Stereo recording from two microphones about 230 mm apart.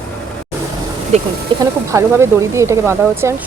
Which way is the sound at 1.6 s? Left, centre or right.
Centre.